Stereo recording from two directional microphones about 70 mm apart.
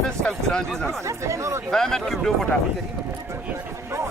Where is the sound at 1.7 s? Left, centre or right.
Centre.